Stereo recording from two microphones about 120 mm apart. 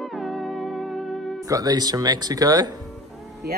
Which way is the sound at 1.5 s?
30° right (ahead or behind).